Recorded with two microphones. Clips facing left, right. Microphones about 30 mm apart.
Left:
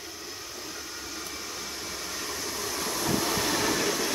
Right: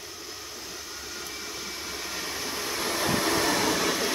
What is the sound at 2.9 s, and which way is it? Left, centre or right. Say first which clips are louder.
Train: right 3 dB; right.